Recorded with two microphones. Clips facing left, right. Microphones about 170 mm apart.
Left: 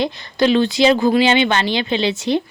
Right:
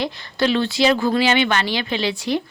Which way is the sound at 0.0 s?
20° left (ahead or behind).